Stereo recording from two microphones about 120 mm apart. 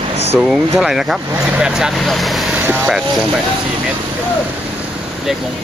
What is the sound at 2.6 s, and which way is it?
Vehicle, 15° right (ahead or behind).